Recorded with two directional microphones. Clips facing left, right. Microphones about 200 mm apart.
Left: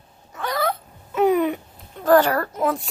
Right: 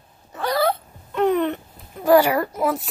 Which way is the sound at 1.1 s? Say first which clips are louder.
Left 1 dB; 10° left (ahead or behind).